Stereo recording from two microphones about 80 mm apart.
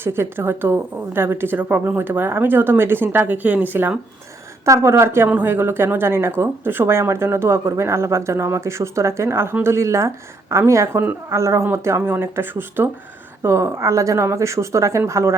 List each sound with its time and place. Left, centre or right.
0.0 s a woman's voice: right
4.6 s speech: right